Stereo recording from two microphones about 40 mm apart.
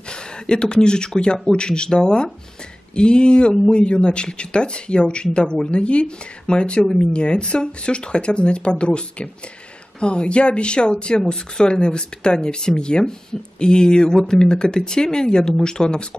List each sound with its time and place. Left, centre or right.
0.1 s speech: left